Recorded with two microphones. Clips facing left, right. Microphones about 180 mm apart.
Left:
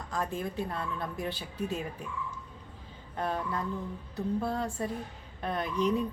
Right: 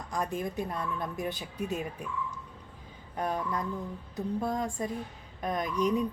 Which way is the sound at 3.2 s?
15° right (ahead or behind).